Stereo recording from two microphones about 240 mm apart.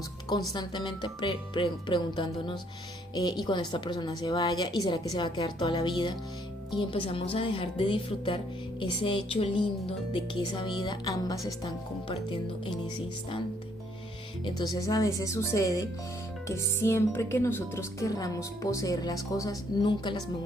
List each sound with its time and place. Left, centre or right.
0.5 s speech: centre
14.4 s speech: centre